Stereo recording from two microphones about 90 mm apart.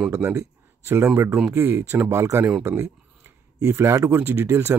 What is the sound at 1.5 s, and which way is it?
Speech, 25° right (ahead or behind).